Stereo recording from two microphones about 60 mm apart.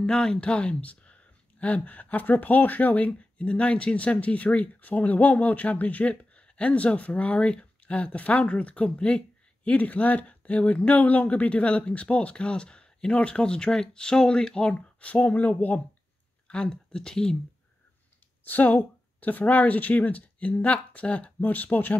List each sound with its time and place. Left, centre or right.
0.0 s speech: centre
14.7 s speech: left
18.4 s speech: left